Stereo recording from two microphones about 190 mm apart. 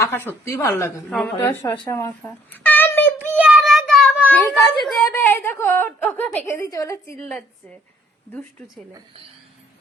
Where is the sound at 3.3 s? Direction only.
10° right (ahead or behind); by 6.9 s 15° left (ahead or behind).